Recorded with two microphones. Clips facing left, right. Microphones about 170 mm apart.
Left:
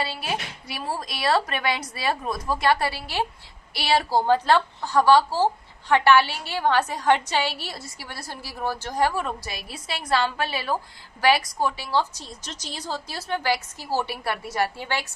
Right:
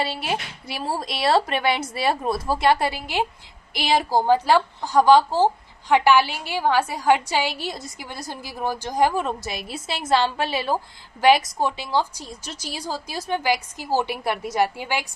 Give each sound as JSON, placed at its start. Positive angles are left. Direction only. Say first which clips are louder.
{"t": 0.0, "sound": "a woman's voice", "louder": "right 3 dB", "side_deg": -25}